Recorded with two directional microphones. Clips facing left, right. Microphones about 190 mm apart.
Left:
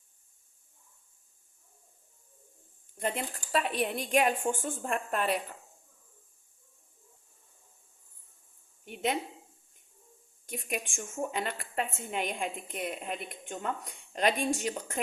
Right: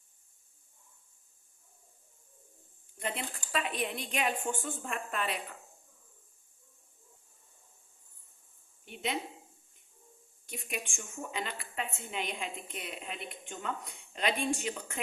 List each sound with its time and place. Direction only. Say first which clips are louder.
3.5 s a woman's voice: left 5 dB; 45° left (ahead or behind)
8.8 s a sound: left 5 dB; 50° left (ahead or behind)
10.4 s a woman's voice: left 4 dB; 45° left (ahead or behind)